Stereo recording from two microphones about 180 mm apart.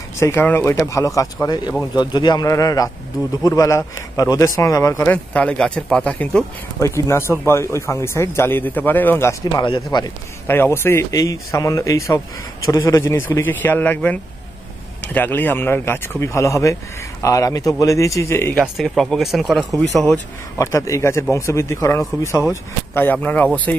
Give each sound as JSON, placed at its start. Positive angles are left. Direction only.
{"t": 0.2, "sound": "speech", "side_deg": 15}
{"t": 9.4, "sound": "speech", "side_deg": 20}
{"t": 10.4, "sound": "speech", "side_deg": 10}
{"t": 18.6, "sound": "speech", "side_deg": 0}
{"t": 20.5, "sound": "speech", "side_deg": 15}